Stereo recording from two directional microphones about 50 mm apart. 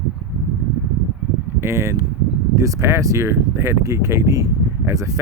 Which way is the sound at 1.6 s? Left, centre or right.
Right.